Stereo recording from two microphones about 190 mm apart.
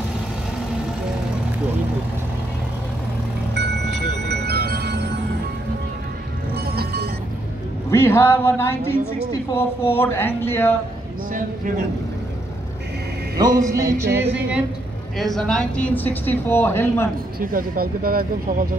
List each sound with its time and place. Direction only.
4.3 s music: 55° right (ahead or behind)
6.5 s music: 55° right (ahead or behind)
7.9 s a woman's voice: 15° left (ahead or behind)
13.6 s music: 15° right (ahead or behind)
15.1 s a woman's voice: centre (ahead or behind)
17.4 s speech: 50° right (ahead or behind)